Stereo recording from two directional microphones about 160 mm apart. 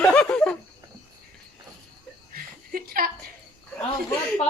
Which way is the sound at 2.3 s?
65° right (ahead or behind).